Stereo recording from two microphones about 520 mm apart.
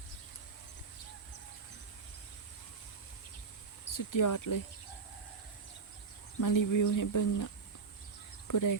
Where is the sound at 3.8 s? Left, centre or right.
Left.